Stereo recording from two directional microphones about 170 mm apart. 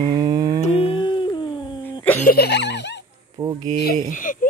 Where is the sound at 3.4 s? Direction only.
20° right (ahead or behind).